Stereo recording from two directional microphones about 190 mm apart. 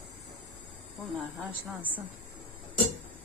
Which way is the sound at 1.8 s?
10° right (ahead or behind).